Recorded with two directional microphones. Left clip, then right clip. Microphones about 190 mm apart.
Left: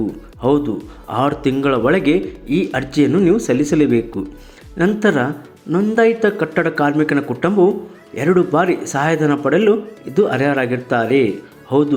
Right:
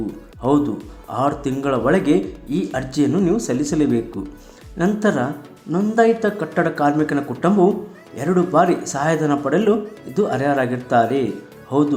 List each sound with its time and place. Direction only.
1.0 s speech: 15° left (ahead or behind)